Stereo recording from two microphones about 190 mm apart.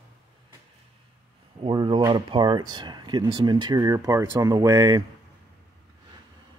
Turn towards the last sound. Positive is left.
turn(degrees=-20)  # may be behind; listen again after turning